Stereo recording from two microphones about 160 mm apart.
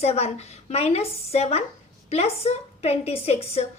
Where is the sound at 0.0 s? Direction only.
40° left (ahead or behind).